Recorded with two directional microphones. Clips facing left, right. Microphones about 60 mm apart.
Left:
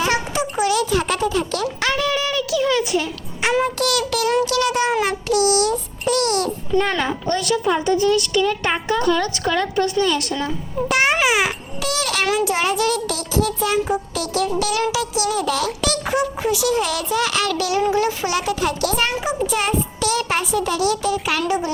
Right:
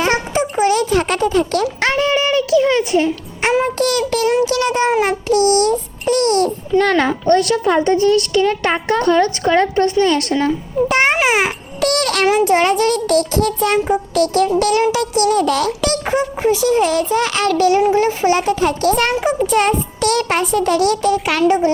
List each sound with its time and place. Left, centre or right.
0.0 s music: right
1.8 s a child's voice: right
6.7 s a child's voice: right
10.8 s a child's voice: right
11.8 s music: right
12.5 s a child's voice: right
16.0 s a child's voice: right
18.9 s a child's voice: right